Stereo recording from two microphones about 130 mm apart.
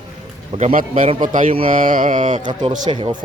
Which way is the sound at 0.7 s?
90° right.